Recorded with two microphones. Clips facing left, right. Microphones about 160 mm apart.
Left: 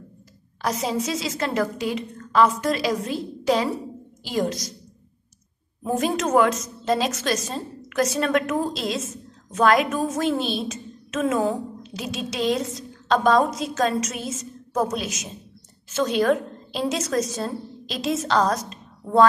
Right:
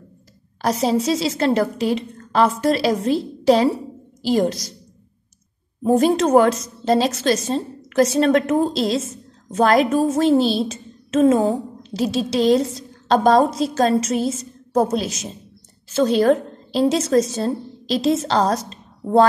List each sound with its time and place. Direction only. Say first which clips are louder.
0.6 s a woman's voice: right 6 dB; 35° right (ahead or behind)
5.9 s a woman's voice: right 7 dB; 30° right (ahead or behind)